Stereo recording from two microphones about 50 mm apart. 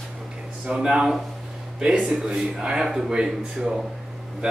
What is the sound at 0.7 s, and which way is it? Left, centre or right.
Speech, centre.